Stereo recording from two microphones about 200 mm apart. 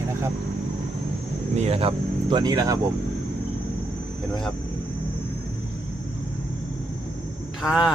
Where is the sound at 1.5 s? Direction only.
30° right (ahead or behind).